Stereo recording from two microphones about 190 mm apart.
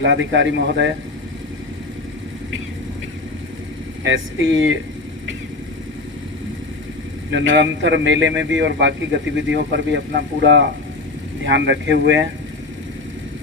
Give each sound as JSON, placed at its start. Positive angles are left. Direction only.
{"t": 0.0, "sound": "speech", "side_deg": -80}
{"t": 4.0, "sound": "speech", "side_deg": -85}
{"t": 7.3, "sound": "speech", "side_deg": -75}